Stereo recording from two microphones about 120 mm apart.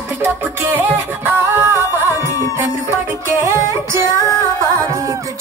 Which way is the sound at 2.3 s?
25° left (ahead or behind).